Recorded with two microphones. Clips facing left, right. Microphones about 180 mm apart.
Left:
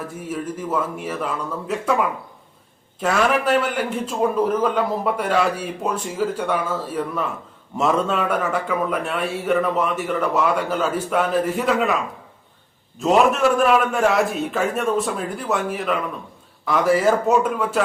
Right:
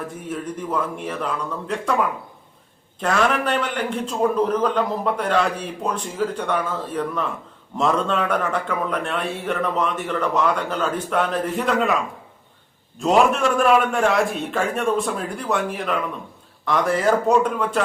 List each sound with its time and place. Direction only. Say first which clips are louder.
0.3 s a man's voice: left 2 dB; 5° left (ahead or behind)
13.0 s a man's voice: left 1 dB; centre (ahead or behind)